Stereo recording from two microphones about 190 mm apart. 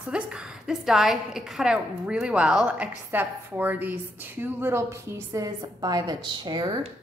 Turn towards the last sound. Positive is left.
turn(degrees=-20)  # may be behind; listen again after turning